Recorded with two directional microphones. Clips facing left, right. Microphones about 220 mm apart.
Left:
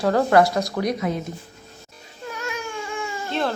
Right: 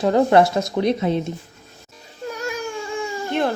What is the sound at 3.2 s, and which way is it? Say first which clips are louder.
Baby cry: right 3 dB; 15° right (ahead or behind).